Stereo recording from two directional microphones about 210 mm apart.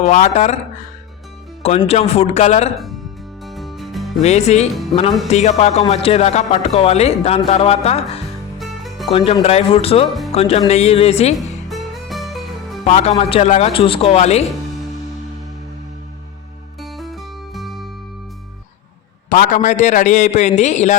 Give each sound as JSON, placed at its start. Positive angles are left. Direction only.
{"t": 0.0, "sound": "speech", "side_deg": 35}
{"t": 1.9, "sound": "speech", "side_deg": 30}
{"t": 3.4, "sound": "music", "side_deg": 0}
{"t": 4.2, "sound": "speech", "side_deg": 30}
{"t": 8.5, "sound": "music", "side_deg": 0}
{"t": 9.1, "sound": "speech", "side_deg": 30}
{"t": 11.3, "sound": "music", "side_deg": 0}
{"t": 12.8, "sound": "speech", "side_deg": 30}
{"t": 16.8, "sound": "music", "side_deg": 0}
{"t": 19.3, "sound": "speech", "side_deg": 35}